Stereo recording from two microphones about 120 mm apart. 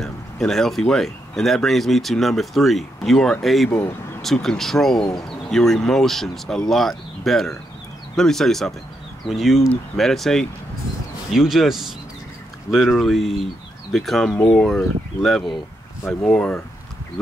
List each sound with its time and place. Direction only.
0.0 s speech: 5° left (ahead or behind)